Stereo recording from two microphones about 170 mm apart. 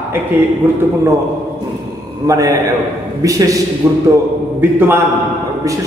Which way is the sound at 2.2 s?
20° right (ahead or behind).